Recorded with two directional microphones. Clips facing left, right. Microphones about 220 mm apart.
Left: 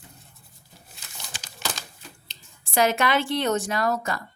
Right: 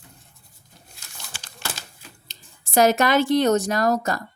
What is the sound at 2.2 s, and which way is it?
Speech, 45° right (ahead or behind).